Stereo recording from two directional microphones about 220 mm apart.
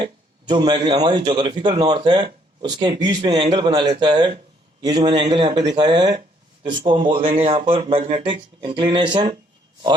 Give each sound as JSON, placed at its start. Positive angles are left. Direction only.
{"t": 0.0, "sound": "speech", "side_deg": -20}